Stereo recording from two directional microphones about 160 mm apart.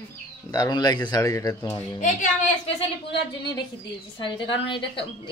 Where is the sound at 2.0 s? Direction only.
50° left (ahead or behind).